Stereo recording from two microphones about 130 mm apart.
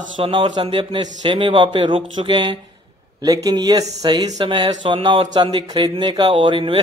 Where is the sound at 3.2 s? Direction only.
30° right (ahead or behind).